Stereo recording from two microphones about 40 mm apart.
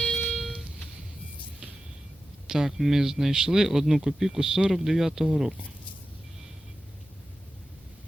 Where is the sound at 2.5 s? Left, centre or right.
Centre.